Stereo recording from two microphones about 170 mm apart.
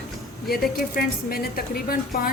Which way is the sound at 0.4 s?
60° left (ahead or behind).